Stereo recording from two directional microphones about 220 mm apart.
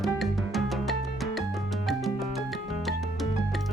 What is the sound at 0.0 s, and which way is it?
Music, centre (ahead or behind).